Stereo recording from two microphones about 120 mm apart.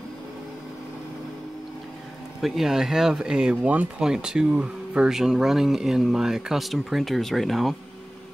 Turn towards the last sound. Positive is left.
turn(degrees=0)  # may be behind; listen again after turning